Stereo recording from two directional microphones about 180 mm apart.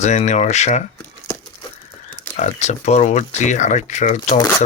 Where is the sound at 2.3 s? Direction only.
40° left (ahead or behind).